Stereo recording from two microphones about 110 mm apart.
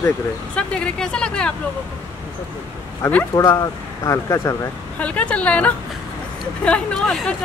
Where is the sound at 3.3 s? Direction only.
35° left (ahead or behind).